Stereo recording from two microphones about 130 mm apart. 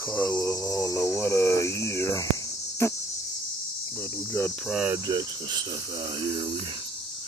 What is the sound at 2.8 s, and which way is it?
Cricket, 20° left (ahead or behind).